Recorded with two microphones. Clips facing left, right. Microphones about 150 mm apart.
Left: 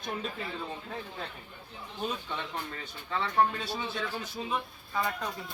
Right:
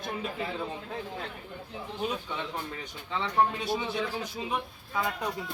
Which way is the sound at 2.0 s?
10° right (ahead or behind).